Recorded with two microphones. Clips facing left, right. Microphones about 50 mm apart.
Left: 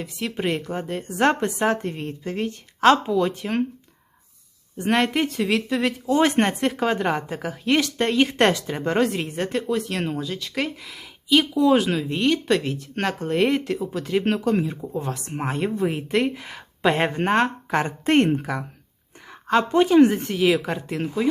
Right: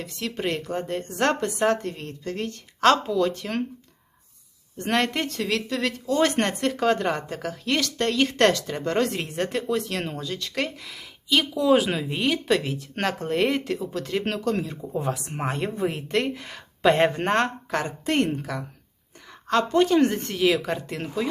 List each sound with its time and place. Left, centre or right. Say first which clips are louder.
0.0 s speech: left 2 dB; centre
4.8 s speech: left 3 dB; centre
9.0 s speech: left 2 dB; centre
14.9 s speech: right 4 dB; centre
17.7 s speech: left 5 dB; left
19.3 s speech: left 2 dB; centre